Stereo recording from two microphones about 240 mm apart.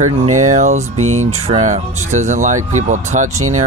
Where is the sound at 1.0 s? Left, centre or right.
Right.